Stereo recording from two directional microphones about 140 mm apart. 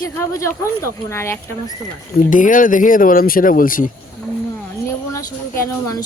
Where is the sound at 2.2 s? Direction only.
70° left (ahead or behind).